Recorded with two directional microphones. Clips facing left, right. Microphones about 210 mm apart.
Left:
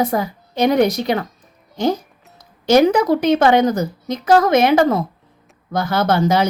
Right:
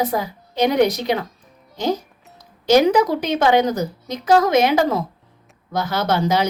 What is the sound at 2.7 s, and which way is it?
A woman's voice, 50° left (ahead or behind).